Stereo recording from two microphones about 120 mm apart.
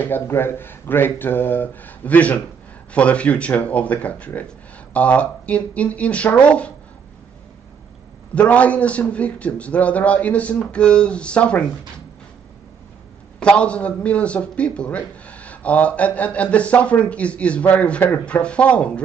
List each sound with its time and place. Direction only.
0.0 s a man's voice: 15° left (ahead or behind)
8.4 s a man's voice: 10° left (ahead or behind)
13.4 s a man's voice: 10° left (ahead or behind)